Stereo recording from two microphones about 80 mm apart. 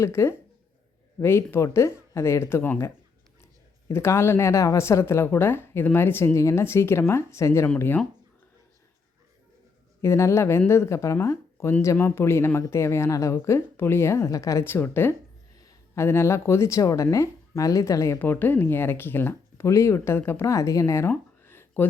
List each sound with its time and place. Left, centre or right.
0.0 s a woman's voice: left
7.8 s speech: left
10.0 s a woman's voice: left
14.6 s a woman's voice: left
18.2 s a woman's voice: left
21.1 s a sound: left